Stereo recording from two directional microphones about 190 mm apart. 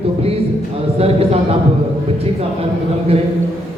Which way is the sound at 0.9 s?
35° right (ahead or behind).